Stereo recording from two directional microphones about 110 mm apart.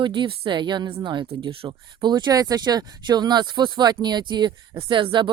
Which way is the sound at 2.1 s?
35° right (ahead or behind).